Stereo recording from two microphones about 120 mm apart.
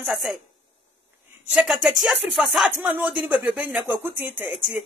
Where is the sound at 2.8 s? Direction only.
15° right (ahead or behind).